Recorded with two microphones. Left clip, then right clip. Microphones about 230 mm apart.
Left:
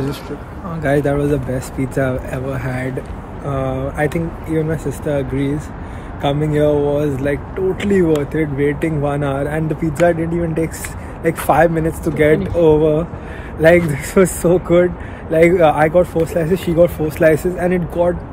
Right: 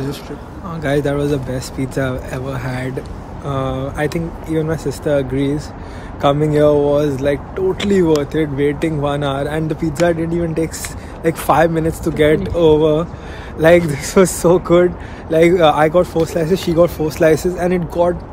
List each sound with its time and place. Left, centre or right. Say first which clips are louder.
0.7 s speech: left 1 dB; centre
4.5 s speech: right 1 dB; centre